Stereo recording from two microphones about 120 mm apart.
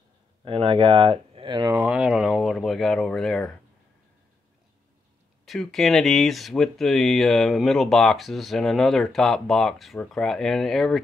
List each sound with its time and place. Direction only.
0.5 s speech: 45° right (ahead or behind)
1.9 s speech: 5° right (ahead or behind)
5.4 s speech: centre (ahead or behind)